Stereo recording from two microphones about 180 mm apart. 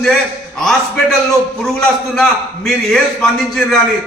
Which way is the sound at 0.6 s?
Centre (ahead or behind).